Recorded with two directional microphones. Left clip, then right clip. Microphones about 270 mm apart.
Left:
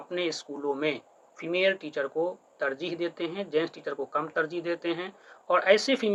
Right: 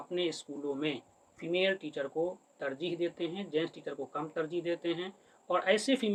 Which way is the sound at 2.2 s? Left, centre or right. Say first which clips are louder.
Left 4 dB; centre.